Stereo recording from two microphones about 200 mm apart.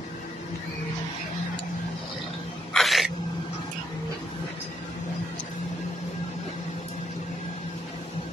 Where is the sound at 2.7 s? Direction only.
Centre (ahead or behind).